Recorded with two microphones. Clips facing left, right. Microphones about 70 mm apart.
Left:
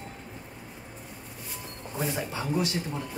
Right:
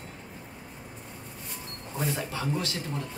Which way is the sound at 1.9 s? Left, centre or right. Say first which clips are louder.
Even; centre.